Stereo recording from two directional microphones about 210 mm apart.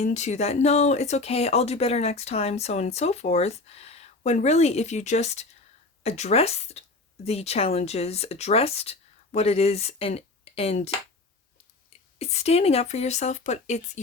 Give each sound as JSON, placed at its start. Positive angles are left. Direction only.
{"t": 0.0, "sound": "speech", "side_deg": 35}
{"t": 12.2, "sound": "speech", "side_deg": 30}